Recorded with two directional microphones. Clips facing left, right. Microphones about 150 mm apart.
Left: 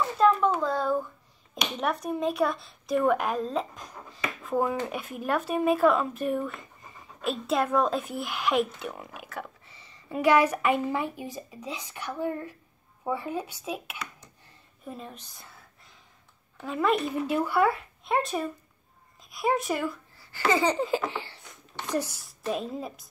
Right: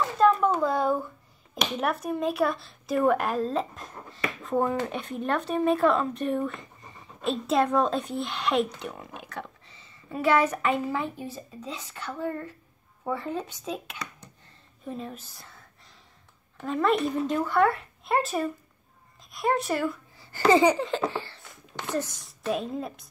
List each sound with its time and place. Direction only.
0.2 s a sound: 10° right (ahead or behind)
1.8 s a woman's voice: 5° right (ahead or behind)
10.1 s a woman's voice: 15° left (ahead or behind); by 15.5 s centre (ahead or behind)
16.5 s a woman's voice: centre (ahead or behind)
20.3 s a sound: 45° right (ahead or behind)
20.7 s a woman's voice: 5° left (ahead or behind)
21.1 s a woman's voice: 15° left (ahead or behind)